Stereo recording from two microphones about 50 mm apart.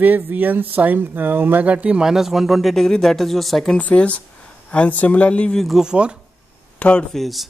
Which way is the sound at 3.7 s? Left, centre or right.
Left.